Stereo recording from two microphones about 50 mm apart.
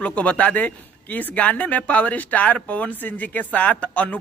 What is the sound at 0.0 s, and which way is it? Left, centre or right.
Speech, left.